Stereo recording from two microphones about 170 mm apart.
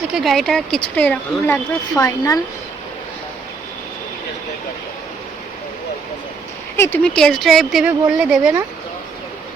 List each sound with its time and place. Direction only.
0.1 s speech: centre (ahead or behind)
2.0 s speech: 20° left (ahead or behind)
6.7 s speech: 15° left (ahead or behind); by 8.5 s 5° right (ahead or behind)